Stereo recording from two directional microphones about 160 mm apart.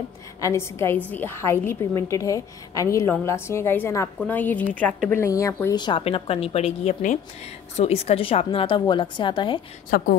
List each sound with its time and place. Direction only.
0.4 s a woman's voice: 15° left (ahead or behind)
9.8 s speech: 60° left (ahead or behind)